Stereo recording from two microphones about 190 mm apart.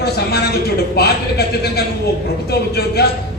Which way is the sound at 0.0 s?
60° left (ahead or behind).